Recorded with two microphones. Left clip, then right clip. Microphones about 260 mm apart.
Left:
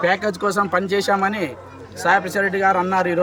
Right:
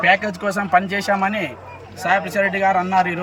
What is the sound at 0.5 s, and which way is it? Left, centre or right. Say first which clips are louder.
Speech: right 5 dB; centre.